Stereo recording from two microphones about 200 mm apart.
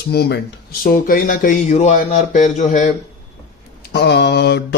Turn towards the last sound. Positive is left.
turn(degrees=55)  # may be behind; listen again after turning